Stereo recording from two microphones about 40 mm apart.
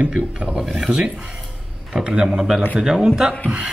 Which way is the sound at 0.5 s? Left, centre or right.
Centre.